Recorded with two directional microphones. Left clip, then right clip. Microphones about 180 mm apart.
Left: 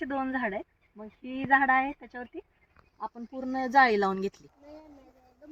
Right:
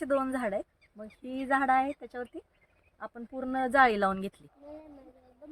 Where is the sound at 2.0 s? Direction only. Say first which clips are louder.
Right 2 dB; 10° right (ahead or behind).